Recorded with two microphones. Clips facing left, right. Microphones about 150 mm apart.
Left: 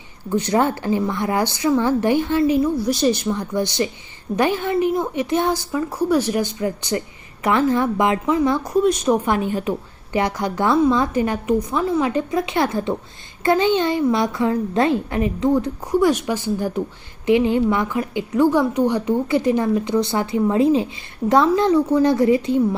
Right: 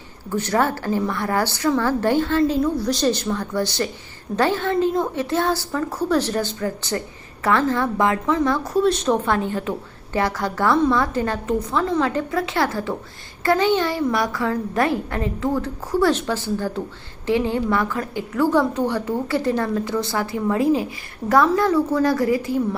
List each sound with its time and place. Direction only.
0.3 s a woman's voice: 15° left (ahead or behind)